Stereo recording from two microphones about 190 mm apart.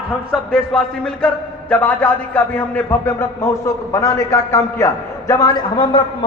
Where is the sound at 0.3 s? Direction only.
Centre (ahead or behind).